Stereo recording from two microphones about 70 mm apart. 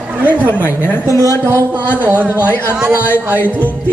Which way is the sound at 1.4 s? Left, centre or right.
Right.